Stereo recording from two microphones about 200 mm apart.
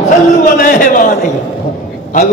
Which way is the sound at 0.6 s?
40° left (ahead or behind).